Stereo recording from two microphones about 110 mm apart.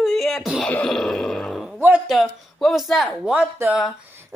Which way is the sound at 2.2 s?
Centre (ahead or behind).